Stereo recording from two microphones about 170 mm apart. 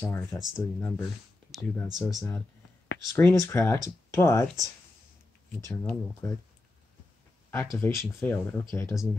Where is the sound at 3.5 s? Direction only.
15° left (ahead or behind).